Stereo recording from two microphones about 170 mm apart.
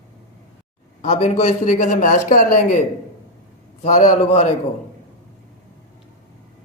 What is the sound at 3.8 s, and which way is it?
Speech, 45° left (ahead or behind).